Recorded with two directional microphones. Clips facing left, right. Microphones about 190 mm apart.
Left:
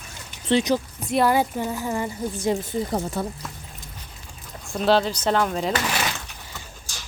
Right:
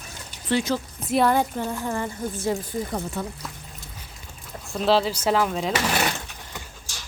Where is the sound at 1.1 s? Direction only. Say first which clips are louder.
Even; 5° left (ahead or behind).